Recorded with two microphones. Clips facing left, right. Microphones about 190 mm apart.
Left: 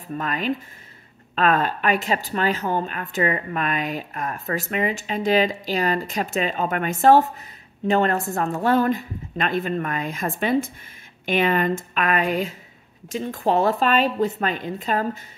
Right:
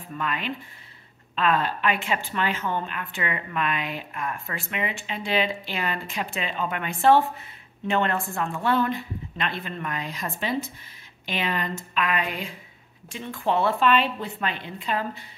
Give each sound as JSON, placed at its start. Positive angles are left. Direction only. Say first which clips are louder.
{"t": 0.2, "sound": "a woman's voice", "louder": "left 4 dB", "side_deg": 40}